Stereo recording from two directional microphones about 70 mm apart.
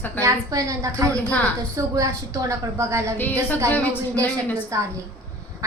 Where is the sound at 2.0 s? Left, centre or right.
Right.